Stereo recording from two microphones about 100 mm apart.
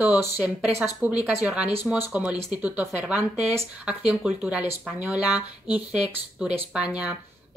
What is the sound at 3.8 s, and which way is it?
Speech, 15° right (ahead or behind).